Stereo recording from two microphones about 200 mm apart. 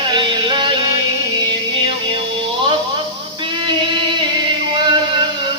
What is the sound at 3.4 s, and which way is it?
Music, 25° right (ahead or behind).